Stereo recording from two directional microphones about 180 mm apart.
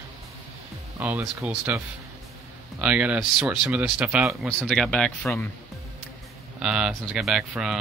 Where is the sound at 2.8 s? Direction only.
5° right (ahead or behind).